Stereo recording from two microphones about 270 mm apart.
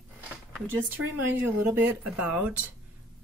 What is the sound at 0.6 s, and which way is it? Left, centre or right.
Speech, centre.